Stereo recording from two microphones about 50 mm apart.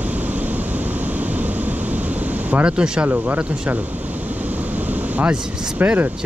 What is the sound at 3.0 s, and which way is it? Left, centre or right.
Speech, right.